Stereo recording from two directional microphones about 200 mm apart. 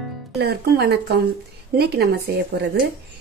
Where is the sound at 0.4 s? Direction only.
55° right (ahead or behind).